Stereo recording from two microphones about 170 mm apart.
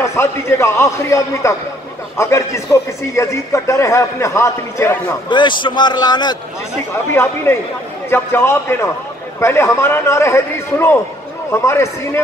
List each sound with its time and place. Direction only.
0.0 s a man's voice: 15° left (ahead or behind)
5.3 s a man's voice: 25° left (ahead or behind)